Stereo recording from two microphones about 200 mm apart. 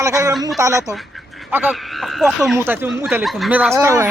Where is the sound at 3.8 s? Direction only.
15° right (ahead or behind).